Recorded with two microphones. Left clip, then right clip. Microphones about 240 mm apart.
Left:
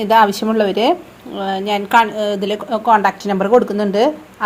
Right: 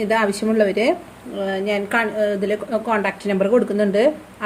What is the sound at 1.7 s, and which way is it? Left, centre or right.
A woman's voice, left.